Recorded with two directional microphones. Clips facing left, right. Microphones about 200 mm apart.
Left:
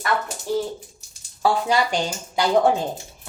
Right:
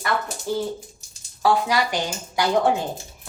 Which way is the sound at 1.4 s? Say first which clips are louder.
Even; 25° left (ahead or behind).